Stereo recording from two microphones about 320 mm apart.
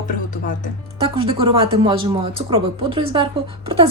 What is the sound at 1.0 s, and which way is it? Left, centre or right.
Speech, centre.